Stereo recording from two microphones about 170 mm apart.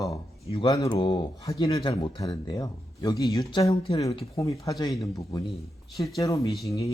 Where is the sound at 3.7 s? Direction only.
35° left (ahead or behind); by 6.9 s 20° left (ahead or behind).